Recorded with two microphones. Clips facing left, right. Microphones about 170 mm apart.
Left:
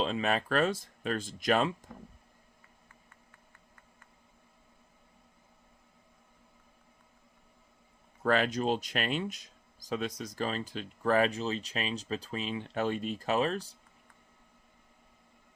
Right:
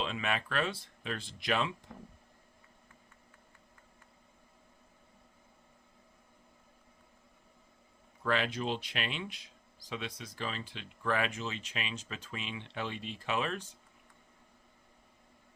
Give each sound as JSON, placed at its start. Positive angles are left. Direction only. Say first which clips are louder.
{"t": 0.0, "sound": "speech", "louder": "left 5 dB", "side_deg": 35}
{"t": 8.2, "sound": "speech", "louder": "left 5 dB", "side_deg": 45}